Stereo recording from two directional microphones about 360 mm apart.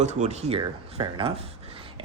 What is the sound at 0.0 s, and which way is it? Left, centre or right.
Speech, centre.